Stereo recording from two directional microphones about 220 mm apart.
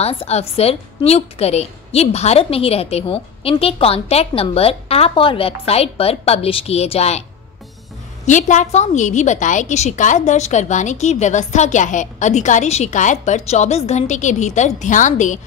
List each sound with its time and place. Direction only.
0.0 s a woman's voice: 25° left (ahead or behind)
8.3 s a woman's voice: 35° left (ahead or behind)